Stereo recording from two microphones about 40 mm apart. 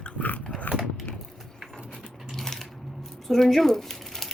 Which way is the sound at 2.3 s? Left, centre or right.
Centre.